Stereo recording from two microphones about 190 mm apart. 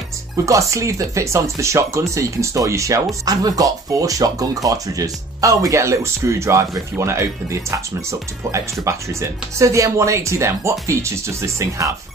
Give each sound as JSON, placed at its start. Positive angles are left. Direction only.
{"t": 0.5, "sound": "speech", "side_deg": -15}